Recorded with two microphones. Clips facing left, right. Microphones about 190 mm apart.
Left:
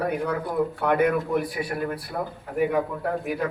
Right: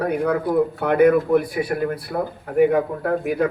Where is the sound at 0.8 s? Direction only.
55° right (ahead or behind).